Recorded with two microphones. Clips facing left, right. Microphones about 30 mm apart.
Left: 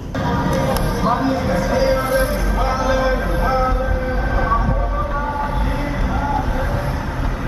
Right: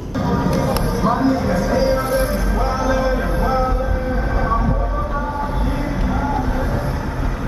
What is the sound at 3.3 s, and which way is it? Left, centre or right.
Vehicle, centre.